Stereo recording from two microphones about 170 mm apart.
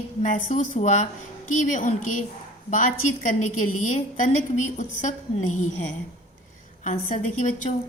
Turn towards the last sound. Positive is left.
turn(degrees=45)  # may be behind; listen again after turning